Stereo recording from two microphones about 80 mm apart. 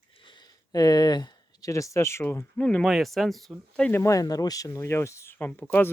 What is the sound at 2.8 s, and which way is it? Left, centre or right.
Speech, centre.